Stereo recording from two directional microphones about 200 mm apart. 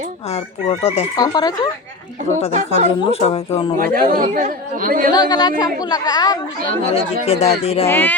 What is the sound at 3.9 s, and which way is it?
Speech, 45° right (ahead or behind).